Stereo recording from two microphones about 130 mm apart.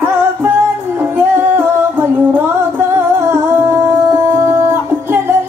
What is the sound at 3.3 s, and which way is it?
Music, 20° right (ahead or behind).